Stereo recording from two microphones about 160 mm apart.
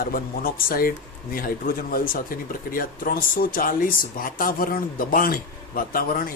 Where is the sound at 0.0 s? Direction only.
65° left (ahead or behind).